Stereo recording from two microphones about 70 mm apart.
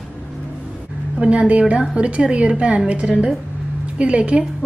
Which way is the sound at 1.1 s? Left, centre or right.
Centre.